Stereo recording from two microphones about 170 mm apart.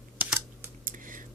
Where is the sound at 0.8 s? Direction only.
50° right (ahead or behind).